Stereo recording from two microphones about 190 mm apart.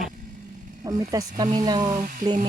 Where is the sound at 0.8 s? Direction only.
20° right (ahead or behind).